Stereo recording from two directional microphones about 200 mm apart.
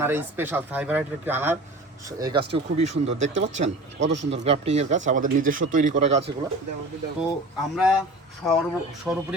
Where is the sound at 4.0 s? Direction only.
65° right (ahead or behind).